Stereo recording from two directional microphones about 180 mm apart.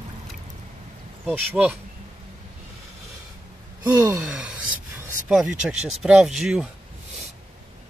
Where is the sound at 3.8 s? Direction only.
5° right (ahead or behind).